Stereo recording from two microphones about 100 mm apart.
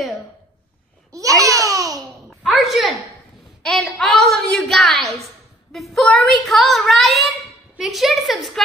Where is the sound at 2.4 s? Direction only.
5° right (ahead or behind).